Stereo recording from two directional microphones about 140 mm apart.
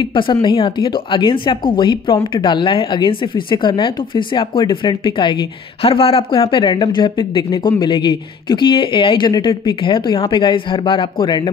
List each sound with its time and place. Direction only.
0.0 s speech: 35° left (ahead or behind)